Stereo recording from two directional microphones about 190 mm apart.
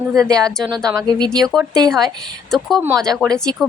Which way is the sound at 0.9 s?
20° right (ahead or behind).